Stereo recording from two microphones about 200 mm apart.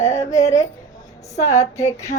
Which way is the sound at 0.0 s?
15° left (ahead or behind).